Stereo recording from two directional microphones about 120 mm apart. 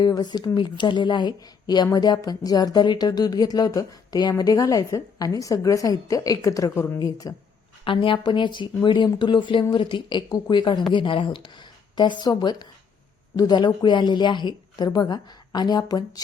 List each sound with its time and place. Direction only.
0.0 s speech: 35° left (ahead or behind); by 7.0 s 20° left (ahead or behind)
7.0 s speech: 30° left (ahead or behind)
7.9 s speech: 45° left (ahead or behind)